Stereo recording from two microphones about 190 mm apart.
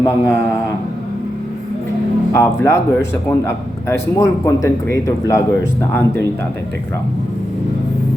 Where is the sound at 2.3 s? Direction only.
15° left (ahead or behind).